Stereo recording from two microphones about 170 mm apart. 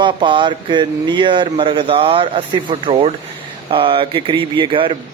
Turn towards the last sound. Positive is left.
turn(degrees=-30)  # may be behind; listen again after turning